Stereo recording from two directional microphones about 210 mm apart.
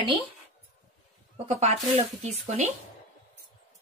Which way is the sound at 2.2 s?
30° right (ahead or behind).